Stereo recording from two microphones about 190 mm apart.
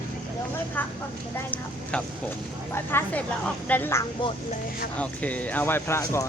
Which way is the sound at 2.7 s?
10° left (ahead or behind).